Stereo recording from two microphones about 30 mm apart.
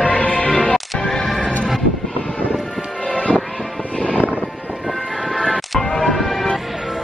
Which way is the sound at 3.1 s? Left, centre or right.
Left.